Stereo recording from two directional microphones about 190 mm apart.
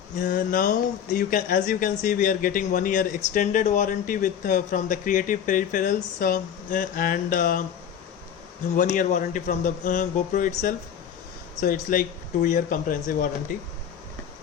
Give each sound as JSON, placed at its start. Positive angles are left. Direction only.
{"t": 0.2, "sound": "speech", "side_deg": 45}
{"t": 8.7, "sound": "speech", "side_deg": 45}